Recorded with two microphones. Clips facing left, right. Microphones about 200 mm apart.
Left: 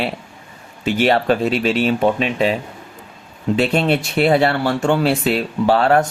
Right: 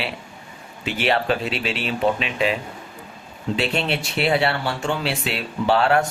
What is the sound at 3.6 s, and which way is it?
Speech, 45° left (ahead or behind).